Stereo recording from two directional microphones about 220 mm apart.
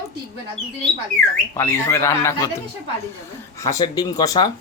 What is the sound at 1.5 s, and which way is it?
Speech, 10° left (ahead or behind).